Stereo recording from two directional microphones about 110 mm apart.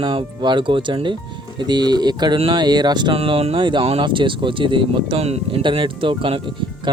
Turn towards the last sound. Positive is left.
turn(degrees=-55)  # may be behind; listen again after turning